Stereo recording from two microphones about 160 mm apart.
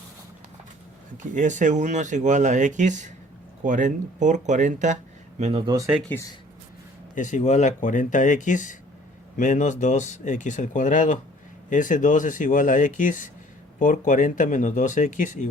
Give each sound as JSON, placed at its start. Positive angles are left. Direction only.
{"t": 1.2, "sound": "speech", "side_deg": -50}
{"t": 5.4, "sound": "speech", "side_deg": -35}
{"t": 7.2, "sound": "speech", "side_deg": 50}